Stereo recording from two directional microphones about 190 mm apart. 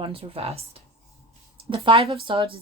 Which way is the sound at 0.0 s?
30° right (ahead or behind).